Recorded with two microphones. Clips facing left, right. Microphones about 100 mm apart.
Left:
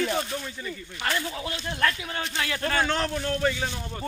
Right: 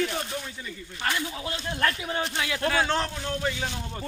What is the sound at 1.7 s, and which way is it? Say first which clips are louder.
Battle cry: even; 25° right (ahead or behind).